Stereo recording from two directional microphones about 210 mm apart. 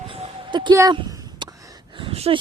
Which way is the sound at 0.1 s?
25° right (ahead or behind).